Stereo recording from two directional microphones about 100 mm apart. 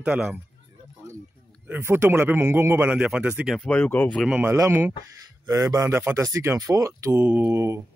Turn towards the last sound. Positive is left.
turn(degrees=-25)  # may be behind; listen again after turning